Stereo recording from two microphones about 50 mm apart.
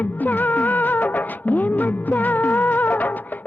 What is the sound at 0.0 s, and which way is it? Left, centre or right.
Music, left.